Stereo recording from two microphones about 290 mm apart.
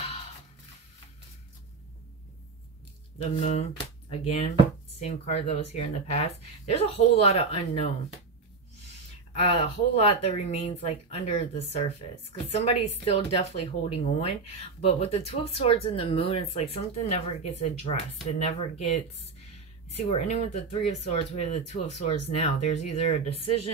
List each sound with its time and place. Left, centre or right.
3.3 s speech: left
9.3 s speech: centre
13.0 s speech: left
20.1 s speech: left